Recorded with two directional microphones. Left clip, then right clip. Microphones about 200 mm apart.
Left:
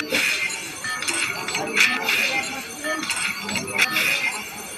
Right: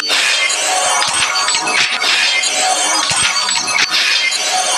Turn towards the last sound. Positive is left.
turn(degrees=-40)  # may be behind; listen again after turning